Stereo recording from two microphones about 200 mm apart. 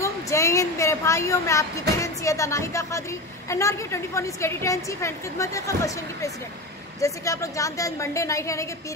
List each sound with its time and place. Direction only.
0.0 s a woman's voice: 15° left (ahead or behind)